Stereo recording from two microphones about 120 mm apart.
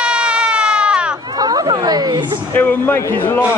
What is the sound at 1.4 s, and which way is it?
Chatter, 35° right (ahead or behind).